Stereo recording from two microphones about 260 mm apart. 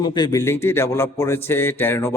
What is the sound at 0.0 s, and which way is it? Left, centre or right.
A man's voice, centre.